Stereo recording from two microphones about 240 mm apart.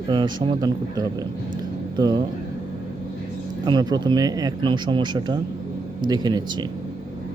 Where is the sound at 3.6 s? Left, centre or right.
Centre.